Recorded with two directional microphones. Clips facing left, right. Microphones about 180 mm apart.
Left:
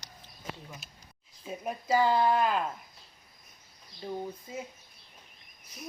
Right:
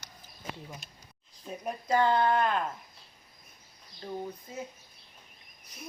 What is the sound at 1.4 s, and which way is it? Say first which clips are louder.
Speech: left 1 dB; 5° left (ahead or behind).